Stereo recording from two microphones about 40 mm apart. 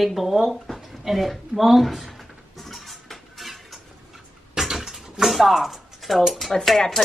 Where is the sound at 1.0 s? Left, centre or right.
Centre.